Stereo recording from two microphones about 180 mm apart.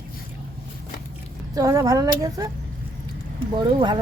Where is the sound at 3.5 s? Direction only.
25° right (ahead or behind).